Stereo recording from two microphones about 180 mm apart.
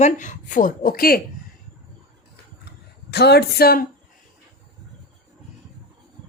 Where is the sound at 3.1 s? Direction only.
65° left (ahead or behind).